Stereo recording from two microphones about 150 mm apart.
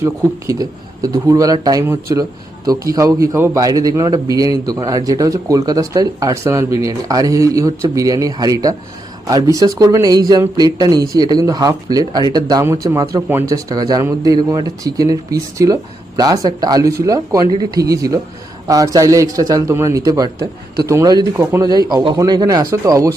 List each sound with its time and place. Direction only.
0.0 s a man's voice: 25° right (ahead or behind)